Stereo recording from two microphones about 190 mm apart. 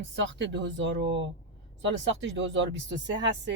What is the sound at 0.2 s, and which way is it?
Speech, 70° right (ahead or behind).